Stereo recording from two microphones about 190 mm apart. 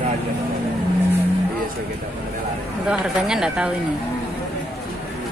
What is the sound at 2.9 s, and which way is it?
Speech, 5° right (ahead or behind).